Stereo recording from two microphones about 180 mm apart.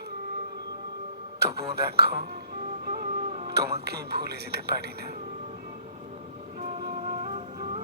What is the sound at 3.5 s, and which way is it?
Speech, 60° right (ahead or behind).